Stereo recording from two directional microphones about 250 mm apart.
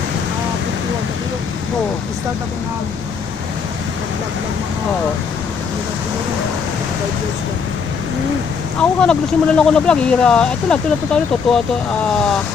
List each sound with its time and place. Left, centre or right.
8.8 s speech: centre